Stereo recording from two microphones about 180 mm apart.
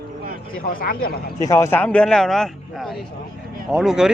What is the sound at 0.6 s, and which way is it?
Speech, 55° left (ahead or behind).